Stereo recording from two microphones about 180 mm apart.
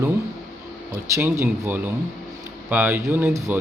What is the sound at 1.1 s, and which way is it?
Speech, 15° right (ahead or behind).